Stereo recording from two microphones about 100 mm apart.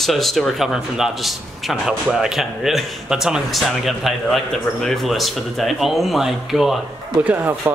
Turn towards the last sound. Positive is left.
turn(degrees=-20)  # may be behind; listen again after turning